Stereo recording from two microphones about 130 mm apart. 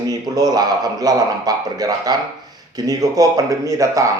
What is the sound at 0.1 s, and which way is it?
A man's voice, 30° right (ahead or behind).